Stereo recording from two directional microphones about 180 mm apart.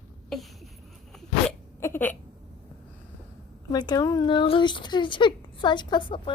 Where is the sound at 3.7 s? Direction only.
25° left (ahead or behind).